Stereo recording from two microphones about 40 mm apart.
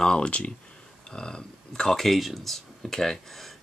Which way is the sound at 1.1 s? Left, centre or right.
Centre.